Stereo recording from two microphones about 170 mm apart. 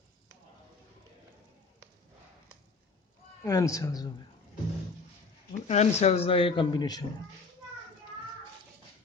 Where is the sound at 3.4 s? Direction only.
20° left (ahead or behind).